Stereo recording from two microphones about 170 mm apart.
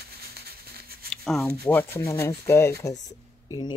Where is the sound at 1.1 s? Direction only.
Centre (ahead or behind).